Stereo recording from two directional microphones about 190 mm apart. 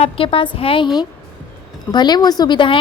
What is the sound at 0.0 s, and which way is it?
A woman's voice, 30° left (ahead or behind).